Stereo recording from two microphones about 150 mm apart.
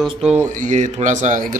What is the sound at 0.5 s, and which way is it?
A man's voice, 55° right (ahead or behind).